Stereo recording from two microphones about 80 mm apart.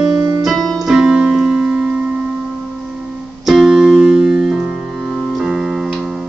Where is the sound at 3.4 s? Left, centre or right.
Centre.